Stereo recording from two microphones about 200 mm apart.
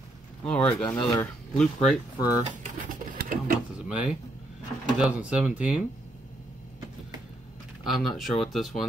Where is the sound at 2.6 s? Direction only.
45° right (ahead or behind).